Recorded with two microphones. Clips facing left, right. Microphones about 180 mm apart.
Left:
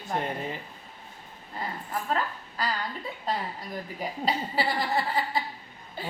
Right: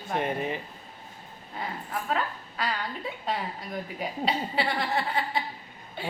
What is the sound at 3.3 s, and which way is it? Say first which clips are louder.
Speech: left 1 dB; centre (ahead or behind).